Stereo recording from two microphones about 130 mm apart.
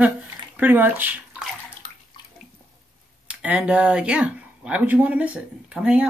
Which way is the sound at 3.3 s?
10° right (ahead or behind).